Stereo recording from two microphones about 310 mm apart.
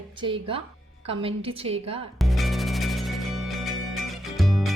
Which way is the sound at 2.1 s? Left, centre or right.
Centre.